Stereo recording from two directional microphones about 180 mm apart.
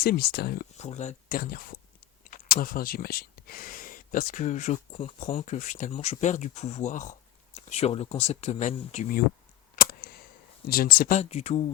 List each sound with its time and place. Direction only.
0.0 s speech: 60° left (ahead or behind)
0.8 s speech: 40° left (ahead or behind)
1.4 s speech: 55° left (ahead or behind); by 9.0 s 40° left (ahead or behind)
9.7 s a sound: 55° left (ahead or behind)
10.7 s speech: 55° left (ahead or behind)
11.2 s speech: 35° left (ahead or behind)